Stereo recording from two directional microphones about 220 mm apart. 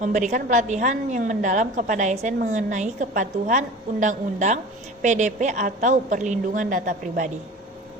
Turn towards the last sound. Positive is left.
turn(degrees=-35)  # may be behind; listen again after turning